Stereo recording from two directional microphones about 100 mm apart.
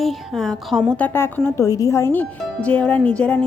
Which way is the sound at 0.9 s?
20° left (ahead or behind).